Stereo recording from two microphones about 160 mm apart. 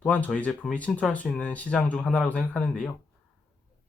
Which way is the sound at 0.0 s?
10° left (ahead or behind).